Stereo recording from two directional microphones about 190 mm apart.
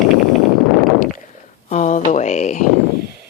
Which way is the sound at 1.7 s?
40° left (ahead or behind).